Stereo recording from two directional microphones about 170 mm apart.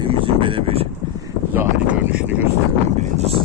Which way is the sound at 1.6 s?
10° right (ahead or behind).